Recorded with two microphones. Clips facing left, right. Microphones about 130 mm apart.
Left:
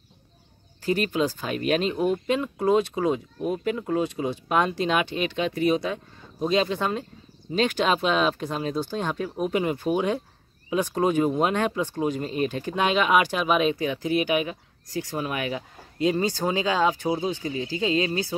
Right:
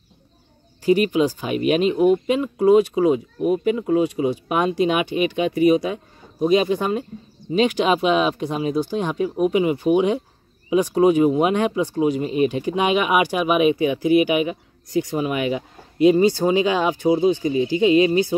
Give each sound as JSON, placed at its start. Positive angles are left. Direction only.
{"t": 0.8, "sound": "speech", "side_deg": -10}